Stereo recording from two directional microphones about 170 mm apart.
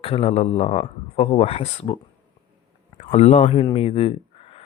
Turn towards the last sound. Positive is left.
turn(degrees=35)  # may be behind; listen again after turning